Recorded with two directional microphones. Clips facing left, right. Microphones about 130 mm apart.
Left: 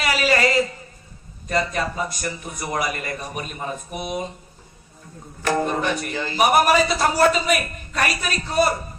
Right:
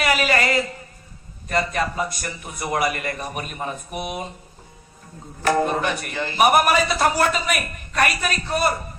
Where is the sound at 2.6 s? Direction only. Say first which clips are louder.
Right 3 dB; 50° right (ahead or behind).